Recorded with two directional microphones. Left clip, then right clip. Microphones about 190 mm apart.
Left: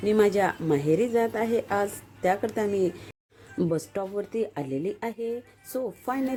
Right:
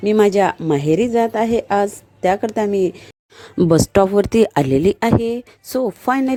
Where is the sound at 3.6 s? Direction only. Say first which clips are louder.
Right 15 dB; 55° right (ahead or behind).